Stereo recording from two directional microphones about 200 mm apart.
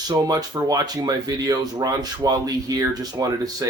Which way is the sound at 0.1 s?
20° right (ahead or behind).